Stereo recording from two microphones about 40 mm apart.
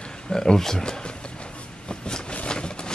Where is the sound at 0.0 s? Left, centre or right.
Centre.